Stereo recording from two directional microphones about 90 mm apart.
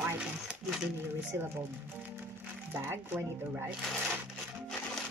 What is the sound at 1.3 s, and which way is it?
Speech, 25° right (ahead or behind).